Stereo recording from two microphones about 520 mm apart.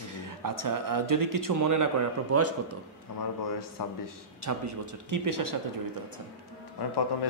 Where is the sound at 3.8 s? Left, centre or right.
Left.